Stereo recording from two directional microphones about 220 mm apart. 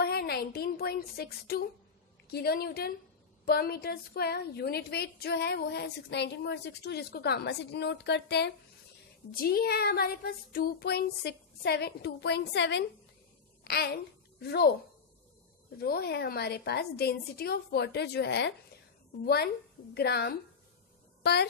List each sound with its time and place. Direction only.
0.0 s a woman's voice: 45° left (ahead or behind)
15.8 s a woman's voice: 45° left (ahead or behind)